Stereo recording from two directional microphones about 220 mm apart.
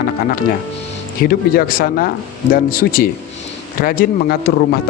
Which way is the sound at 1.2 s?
40° left (ahead or behind).